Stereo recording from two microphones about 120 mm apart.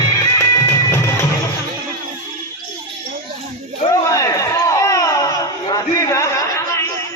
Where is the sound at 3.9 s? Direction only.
30° left (ahead or behind).